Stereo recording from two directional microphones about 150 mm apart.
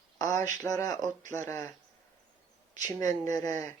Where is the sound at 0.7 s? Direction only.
20° left (ahead or behind).